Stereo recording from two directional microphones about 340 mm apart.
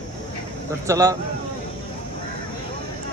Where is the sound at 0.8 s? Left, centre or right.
Centre.